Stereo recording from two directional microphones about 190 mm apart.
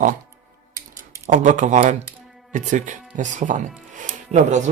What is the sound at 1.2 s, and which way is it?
Speech, 40° right (ahead or behind).